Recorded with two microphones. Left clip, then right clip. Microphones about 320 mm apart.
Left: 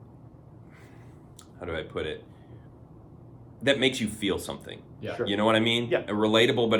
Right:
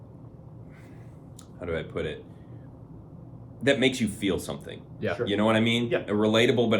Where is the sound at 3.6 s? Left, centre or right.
Centre.